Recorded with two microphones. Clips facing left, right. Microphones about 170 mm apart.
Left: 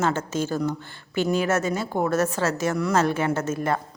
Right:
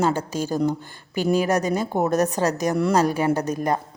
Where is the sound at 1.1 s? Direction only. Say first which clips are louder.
Right 2 dB; 35° right (ahead or behind).